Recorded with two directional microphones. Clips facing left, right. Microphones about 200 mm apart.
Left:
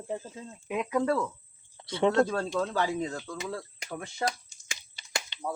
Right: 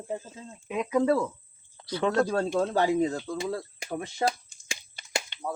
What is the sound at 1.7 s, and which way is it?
Speech, 25° left (ahead or behind).